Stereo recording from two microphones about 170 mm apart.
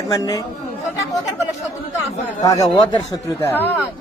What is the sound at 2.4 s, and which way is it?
Speech, 25° left (ahead or behind).